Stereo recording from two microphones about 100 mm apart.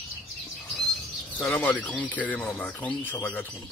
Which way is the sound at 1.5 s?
15° left (ahead or behind).